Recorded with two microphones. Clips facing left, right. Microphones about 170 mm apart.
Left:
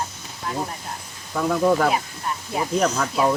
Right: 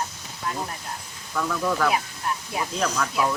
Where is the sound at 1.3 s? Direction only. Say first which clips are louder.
Left 6 dB; 40° left (ahead or behind).